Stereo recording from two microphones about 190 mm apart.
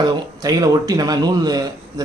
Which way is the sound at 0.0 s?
20° right (ahead or behind).